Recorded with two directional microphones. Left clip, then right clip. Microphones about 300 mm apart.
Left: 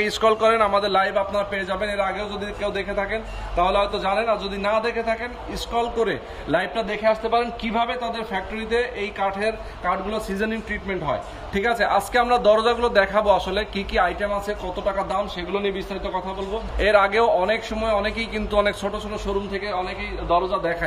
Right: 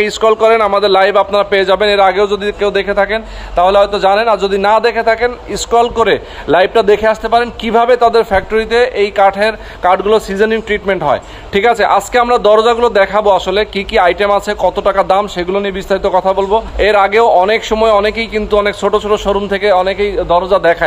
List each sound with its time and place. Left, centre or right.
0.0 s a man's voice: centre
16.8 s a man's voice: centre